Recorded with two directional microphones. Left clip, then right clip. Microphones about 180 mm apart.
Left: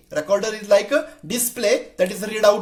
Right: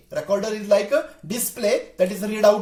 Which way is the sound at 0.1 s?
30° left (ahead or behind).